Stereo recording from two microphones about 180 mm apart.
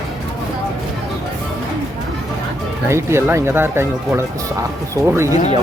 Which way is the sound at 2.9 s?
15° right (ahead or behind).